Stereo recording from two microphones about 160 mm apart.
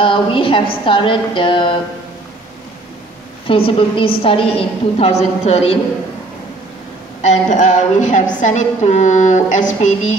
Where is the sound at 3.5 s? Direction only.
35° left (ahead or behind).